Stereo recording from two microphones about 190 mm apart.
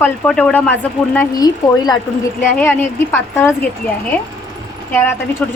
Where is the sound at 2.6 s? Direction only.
10° left (ahead or behind).